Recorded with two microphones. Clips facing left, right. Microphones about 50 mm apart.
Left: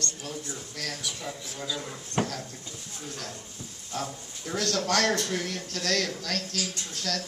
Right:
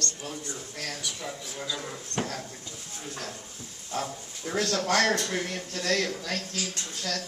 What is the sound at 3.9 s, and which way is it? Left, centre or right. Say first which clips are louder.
A man's voice: right 1 dB; right.